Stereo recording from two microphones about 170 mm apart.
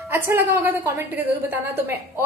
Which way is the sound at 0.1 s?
10° right (ahead or behind).